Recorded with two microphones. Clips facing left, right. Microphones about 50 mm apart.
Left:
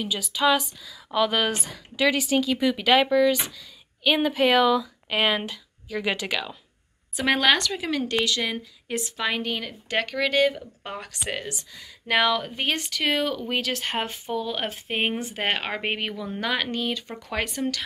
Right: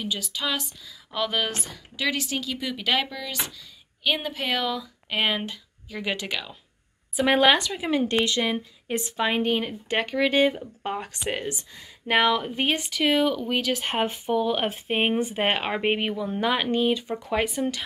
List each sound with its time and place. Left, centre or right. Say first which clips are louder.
0.0 s speech: left 6 dB; centre
7.2 s a woman's voice: right 2 dB; centre
13.8 s a woman's voice: right 3 dB; centre